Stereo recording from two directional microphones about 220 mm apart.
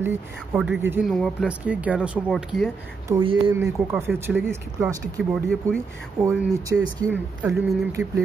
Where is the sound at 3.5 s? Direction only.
10° right (ahead or behind).